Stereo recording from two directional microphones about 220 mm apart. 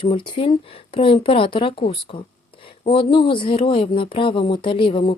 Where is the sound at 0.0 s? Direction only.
25° left (ahead or behind).